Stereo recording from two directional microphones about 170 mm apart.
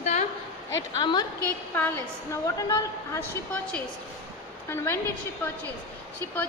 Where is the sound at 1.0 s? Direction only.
25° left (ahead or behind).